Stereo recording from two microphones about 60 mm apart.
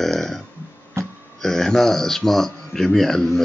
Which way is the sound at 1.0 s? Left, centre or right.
Right.